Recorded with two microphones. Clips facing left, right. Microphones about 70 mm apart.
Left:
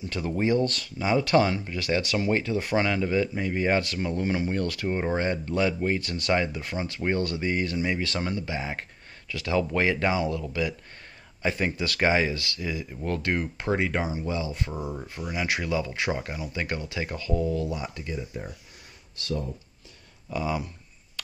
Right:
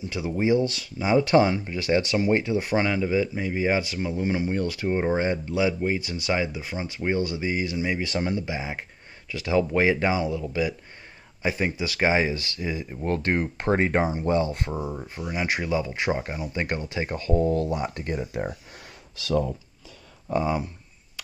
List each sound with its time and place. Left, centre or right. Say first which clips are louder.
0.4 s speech: right 2 dB; centre
8.0 s speech: right 3 dB; centre; by 14.0 s right
14.0 s speech: right 6 dB; right
14.8 s speech: right 2 dB; centre
15.3 s speech: right 2 dB; right
19.2 s speech: right 2 dB; right
20.2 s speech: right 4 dB; right